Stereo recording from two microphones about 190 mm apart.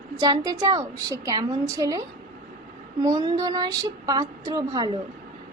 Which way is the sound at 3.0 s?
20° right (ahead or behind).